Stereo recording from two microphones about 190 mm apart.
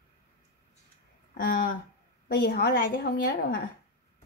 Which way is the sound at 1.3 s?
50° left (ahead or behind).